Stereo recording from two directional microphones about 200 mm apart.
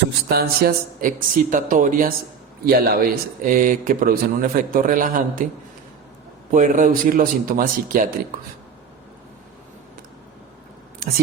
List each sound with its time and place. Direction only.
0.3 s speech: 50° right (ahead or behind)
6.5 s speech: 40° right (ahead or behind)